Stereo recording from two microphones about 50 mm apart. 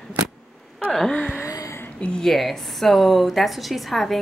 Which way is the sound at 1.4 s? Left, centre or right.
Left.